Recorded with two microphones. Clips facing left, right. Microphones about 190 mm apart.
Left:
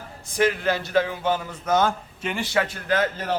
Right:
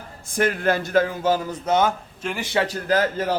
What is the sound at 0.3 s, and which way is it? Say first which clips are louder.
A man's voice: right 1 dB; 50° right (ahead or behind).